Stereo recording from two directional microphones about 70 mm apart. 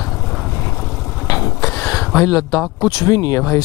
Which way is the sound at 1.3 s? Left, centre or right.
Left.